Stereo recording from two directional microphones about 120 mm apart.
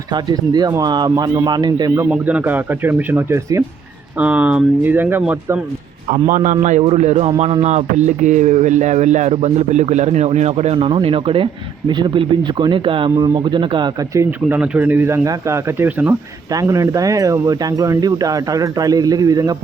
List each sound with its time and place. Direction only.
0.1 s speech: 35° right (ahead or behind)
2.0 s speech: 10° right (ahead or behind)
4.2 s speech: 10° right (ahead or behind)
6.3 s a man's voice: 90° right
6.8 s speech: 65° right (ahead or behind)
7.3 s speech: 50° right (ahead or behind)
13.1 s speech: 30° right (ahead or behind)
14.1 s speech: 25° right (ahead or behind)
14.4 s speech: 10° right (ahead or behind)
16.5 s speech: 30° right (ahead or behind)